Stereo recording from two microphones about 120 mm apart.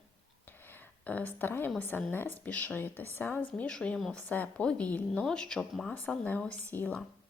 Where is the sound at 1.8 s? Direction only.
15° left (ahead or behind).